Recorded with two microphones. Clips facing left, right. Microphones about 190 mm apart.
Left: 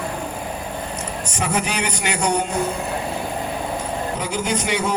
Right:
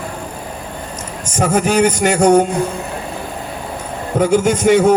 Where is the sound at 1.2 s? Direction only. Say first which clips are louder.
Right 9 dB; 45° right (ahead or behind).